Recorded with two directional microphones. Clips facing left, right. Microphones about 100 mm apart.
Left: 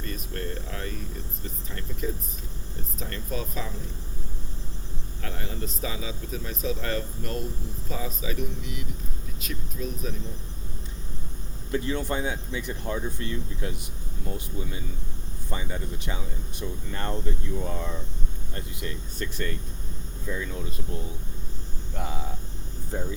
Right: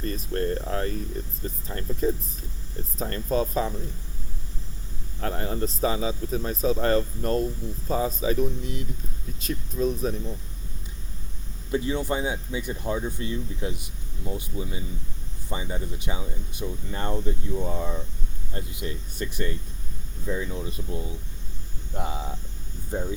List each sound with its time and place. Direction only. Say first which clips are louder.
0.0 s speech: right 7 dB; 35° right (ahead or behind)
5.2 s speech: right 7 dB; 40° right (ahead or behind)
11.7 s speech: right 2 dB; 15° right (ahead or behind)